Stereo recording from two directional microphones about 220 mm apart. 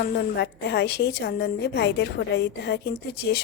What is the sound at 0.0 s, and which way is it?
A woman's voice, 50° left (ahead or behind).